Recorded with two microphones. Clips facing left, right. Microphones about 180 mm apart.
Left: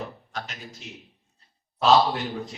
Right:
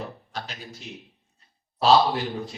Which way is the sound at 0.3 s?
30° right (ahead or behind).